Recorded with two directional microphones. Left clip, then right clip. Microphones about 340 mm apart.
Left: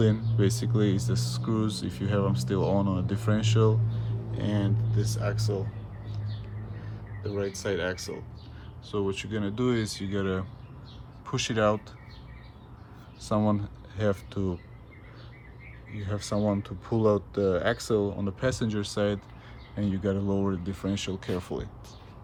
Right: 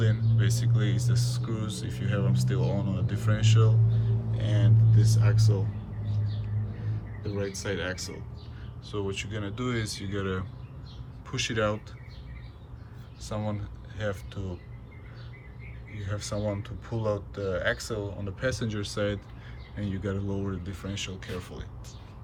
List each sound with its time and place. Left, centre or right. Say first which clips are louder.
0.0 s speech: left 6 dB; centre
7.3 s speech: left 2 dB; centre
13.2 s speech: left 7 dB; centre
16.0 s speech: left 3 dB; centre